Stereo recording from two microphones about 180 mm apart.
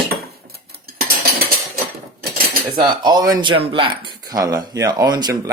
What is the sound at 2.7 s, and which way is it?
Speech, 25° right (ahead or behind).